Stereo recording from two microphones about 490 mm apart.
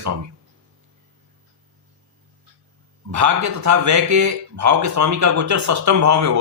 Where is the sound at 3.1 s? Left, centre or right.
Right.